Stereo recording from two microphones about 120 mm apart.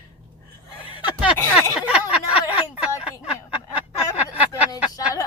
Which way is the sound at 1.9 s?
10° right (ahead or behind).